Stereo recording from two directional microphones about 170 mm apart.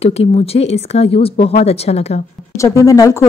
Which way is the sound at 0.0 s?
35° left (ahead or behind).